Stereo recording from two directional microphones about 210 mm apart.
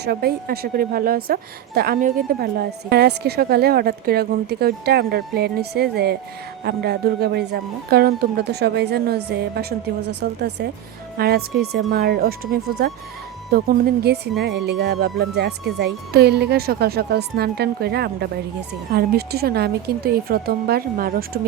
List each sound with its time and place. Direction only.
0.0 s a woman's voice: 50° right (ahead or behind)